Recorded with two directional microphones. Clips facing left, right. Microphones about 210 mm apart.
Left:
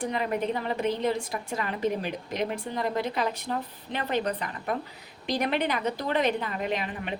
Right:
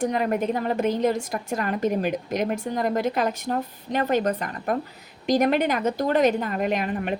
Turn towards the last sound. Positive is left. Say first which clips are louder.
# right 6 dB
turn(degrees=-45)  # may be behind; listen again after turning